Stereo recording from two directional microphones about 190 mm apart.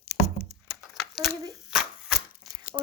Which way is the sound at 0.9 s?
Centre (ahead or behind).